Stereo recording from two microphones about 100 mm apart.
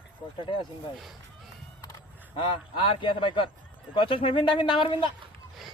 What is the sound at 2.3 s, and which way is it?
Speech, 55° left (ahead or behind).